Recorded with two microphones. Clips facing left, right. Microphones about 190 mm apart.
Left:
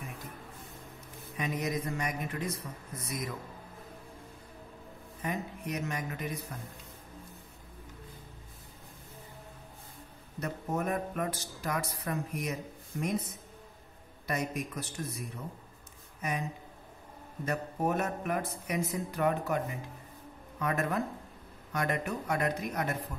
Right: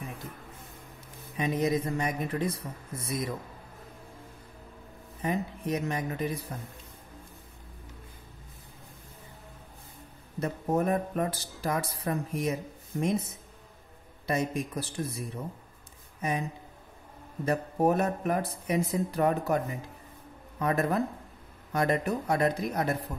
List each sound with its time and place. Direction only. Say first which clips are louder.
1.3 s a man's voice: right 6 dB; 30° right (ahead or behind)
5.2 s speech: right 5 dB; 30° right (ahead or behind)
10.4 s speech: right 6 dB; 30° right (ahead or behind)
14.2 s a man's voice: right 4 dB; 25° right (ahead or behind)
17.5 s speech: right 6 dB; 35° right (ahead or behind)